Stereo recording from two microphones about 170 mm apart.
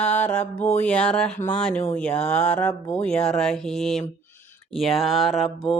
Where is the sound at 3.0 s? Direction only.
5° left (ahead or behind).